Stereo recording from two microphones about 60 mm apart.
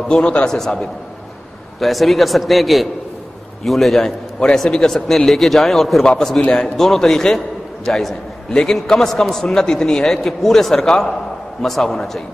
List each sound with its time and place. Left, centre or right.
0.1 s a man's voice: centre
1.8 s a man's voice: centre